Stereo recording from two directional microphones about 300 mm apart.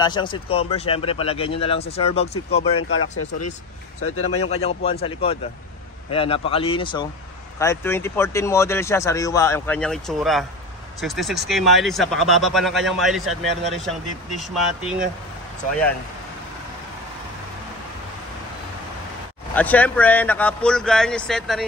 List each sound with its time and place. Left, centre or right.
0.0 s speech: centre
2.9 s speech: left
4.4 s speech: left; by 15.0 s centre
19.5 s speech: centre